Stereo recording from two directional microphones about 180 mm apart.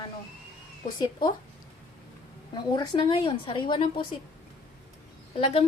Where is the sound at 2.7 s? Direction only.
25° left (ahead or behind).